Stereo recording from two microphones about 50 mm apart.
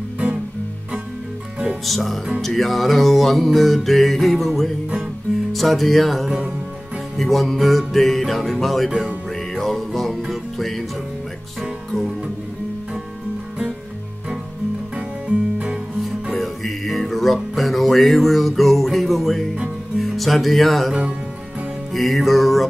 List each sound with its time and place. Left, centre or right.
1.9 s music: centre
15.0 s music: right
16.0 s music: centre
21.9 s music: centre